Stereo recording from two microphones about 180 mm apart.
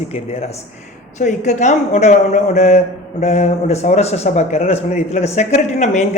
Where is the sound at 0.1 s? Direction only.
35° left (ahead or behind).